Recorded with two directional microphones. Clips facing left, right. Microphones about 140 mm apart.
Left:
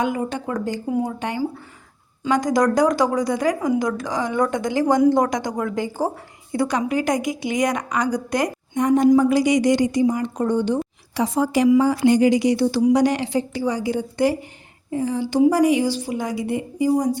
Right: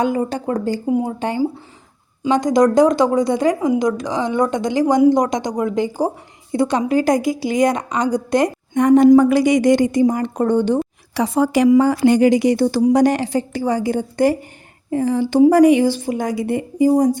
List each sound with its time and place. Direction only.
0.0 s speech: 35° right (ahead or behind)
0.9 s speech: 20° right (ahead or behind)
2.2 s speech: 20° right (ahead or behind)
8.7 s a woman's voice: 65° right (ahead or behind)
14.8 s a woman's voice: 60° right (ahead or behind)